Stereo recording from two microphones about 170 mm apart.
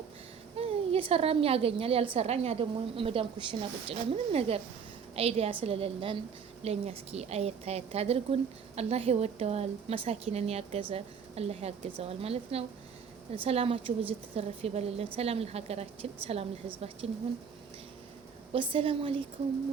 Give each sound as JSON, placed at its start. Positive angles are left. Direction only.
{"t": 0.5, "sound": "a woman's voice", "side_deg": -35}
{"t": 18.5, "sound": "a woman's voice", "side_deg": -30}